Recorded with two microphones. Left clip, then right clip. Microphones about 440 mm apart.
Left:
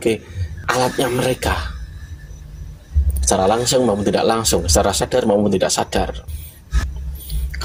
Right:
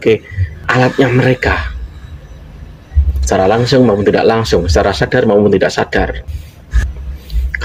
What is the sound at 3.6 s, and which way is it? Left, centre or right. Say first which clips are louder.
Speech: right 6 dB; left.